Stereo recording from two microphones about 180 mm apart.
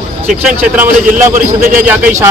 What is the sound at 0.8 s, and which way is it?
A man's voice, 45° right (ahead or behind).